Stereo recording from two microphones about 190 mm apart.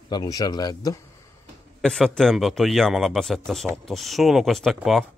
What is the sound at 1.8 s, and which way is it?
A man's voice, 5° left (ahead or behind).